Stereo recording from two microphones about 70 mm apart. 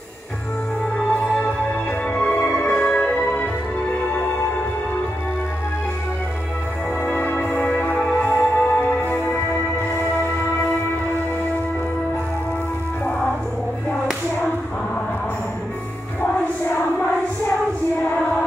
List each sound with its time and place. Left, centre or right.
1.2 s music: centre
7.0 s music: left